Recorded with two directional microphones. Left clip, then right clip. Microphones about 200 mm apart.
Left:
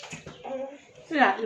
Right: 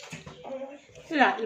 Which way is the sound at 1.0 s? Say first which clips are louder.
Left 1 dB; 15° right (ahead or behind).